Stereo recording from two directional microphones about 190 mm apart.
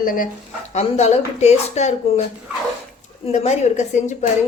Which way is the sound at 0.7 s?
35° left (ahead or behind).